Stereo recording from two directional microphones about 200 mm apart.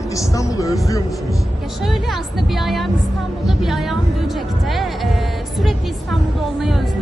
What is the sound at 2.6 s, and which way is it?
Speech, centre (ahead or behind).